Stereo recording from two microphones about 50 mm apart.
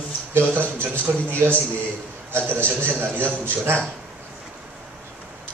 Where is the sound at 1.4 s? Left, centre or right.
Right.